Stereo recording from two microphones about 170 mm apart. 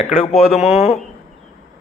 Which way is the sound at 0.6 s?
40° left (ahead or behind).